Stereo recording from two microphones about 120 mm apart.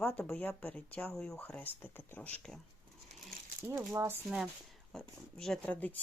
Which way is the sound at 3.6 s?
25° right (ahead or behind).